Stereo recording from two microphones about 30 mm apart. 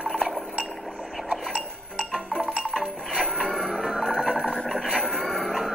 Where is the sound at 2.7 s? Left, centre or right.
Right.